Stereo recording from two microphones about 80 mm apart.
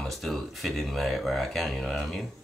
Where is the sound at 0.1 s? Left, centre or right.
Centre.